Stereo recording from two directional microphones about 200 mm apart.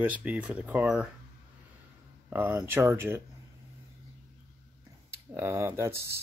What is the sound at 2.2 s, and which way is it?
Speech, 10° right (ahead or behind).